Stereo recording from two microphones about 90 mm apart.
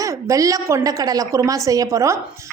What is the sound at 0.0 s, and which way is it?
A woman's voice, 40° right (ahead or behind).